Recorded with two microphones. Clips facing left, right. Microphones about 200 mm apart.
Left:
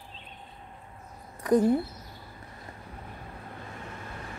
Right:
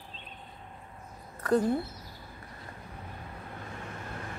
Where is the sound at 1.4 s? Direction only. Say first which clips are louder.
Left 3 dB; 15° left (ahead or behind).